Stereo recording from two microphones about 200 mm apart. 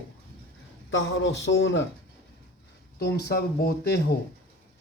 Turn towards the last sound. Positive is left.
turn(degrees=50)  # may be behind; listen again after turning